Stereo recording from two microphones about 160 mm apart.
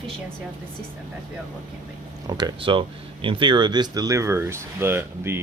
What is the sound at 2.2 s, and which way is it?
Speech, 25° right (ahead or behind).